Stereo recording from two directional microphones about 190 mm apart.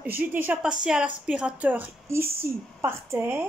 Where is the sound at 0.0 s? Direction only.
10° right (ahead or behind).